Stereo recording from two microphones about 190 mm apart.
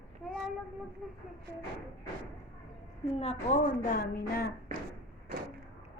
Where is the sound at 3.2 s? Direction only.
35° left (ahead or behind).